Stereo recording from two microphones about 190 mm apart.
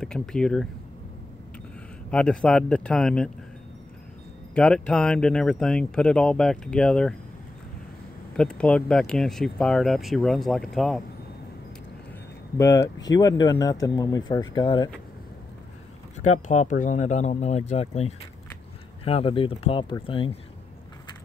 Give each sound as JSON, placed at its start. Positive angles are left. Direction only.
{"t": 0.0, "sound": "speech", "side_deg": 5}
{"t": 2.0, "sound": "speech", "side_deg": 5}
{"t": 4.6, "sound": "speech", "side_deg": 5}
{"t": 8.4, "sound": "speech", "side_deg": 5}
{"t": 12.5, "sound": "speech", "side_deg": 15}
{"t": 16.2, "sound": "speech", "side_deg": 40}